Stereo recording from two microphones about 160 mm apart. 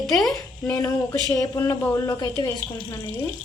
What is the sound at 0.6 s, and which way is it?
Speech, 25° left (ahead or behind).